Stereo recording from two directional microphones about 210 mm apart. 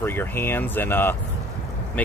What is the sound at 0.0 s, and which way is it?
Speech, 10° left (ahead or behind).